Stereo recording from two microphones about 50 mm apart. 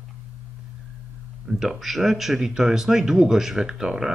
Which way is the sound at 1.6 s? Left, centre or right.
Centre.